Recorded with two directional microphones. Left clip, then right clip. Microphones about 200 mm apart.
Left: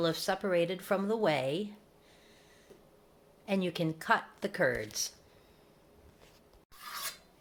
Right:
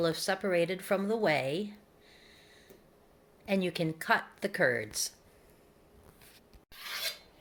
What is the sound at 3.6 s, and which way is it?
Speech, 5° right (ahead or behind).